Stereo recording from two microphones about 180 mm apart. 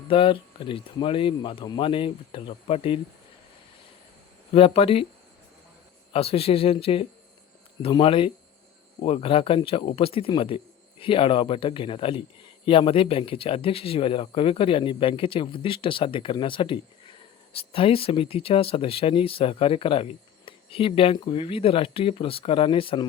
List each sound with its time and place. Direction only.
0.1 s speech: 30° left (ahead or behind)
4.5 s speech: 30° left (ahead or behind)
6.1 s speech: 35° left (ahead or behind)